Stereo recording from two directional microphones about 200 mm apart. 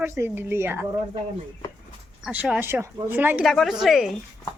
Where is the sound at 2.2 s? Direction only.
5° right (ahead or behind).